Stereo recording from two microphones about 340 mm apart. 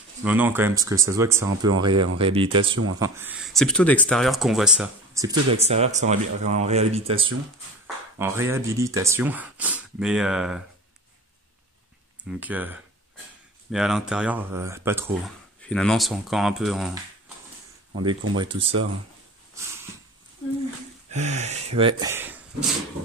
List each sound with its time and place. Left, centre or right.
0.2 s speech: centre
12.3 s speech: centre
18.3 s speech: centre
21.1 s speech: right